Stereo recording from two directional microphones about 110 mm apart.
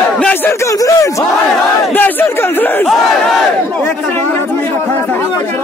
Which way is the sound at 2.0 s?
15° left (ahead or behind).